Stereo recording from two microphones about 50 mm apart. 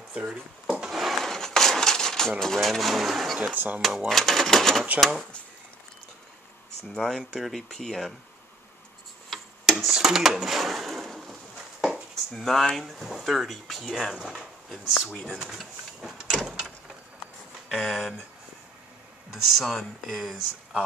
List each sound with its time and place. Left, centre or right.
0.1 s a sound: right
0.9 s a sound: centre
3.5 s speech: right
4.1 s speech: centre
7.0 s speech: centre
9.3 s tick-tock: centre
9.9 s speech: centre
11.8 s a sound: centre
12.8 s speech: centre
15.4 s printer: centre
16.4 s a sound: centre
17.6 s speech: centre
19.3 s speech: centre
20.2 s speech: centre